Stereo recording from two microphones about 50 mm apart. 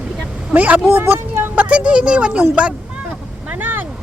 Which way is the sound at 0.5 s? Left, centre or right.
Right.